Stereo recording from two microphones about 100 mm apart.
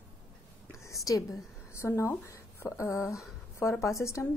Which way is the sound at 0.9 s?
35° left (ahead or behind).